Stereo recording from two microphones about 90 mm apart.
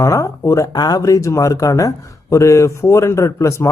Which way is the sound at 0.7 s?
50° left (ahead or behind).